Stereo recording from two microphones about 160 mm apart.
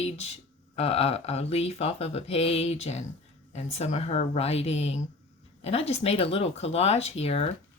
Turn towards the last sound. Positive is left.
turn(degrees=40)  # may be behind; listen again after turning